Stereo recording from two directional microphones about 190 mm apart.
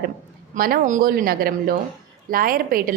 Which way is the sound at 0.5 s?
50° right (ahead or behind).